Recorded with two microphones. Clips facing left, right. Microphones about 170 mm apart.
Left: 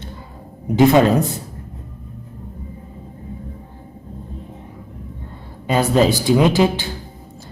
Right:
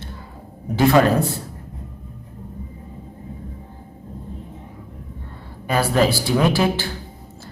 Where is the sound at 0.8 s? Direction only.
20° left (ahead or behind).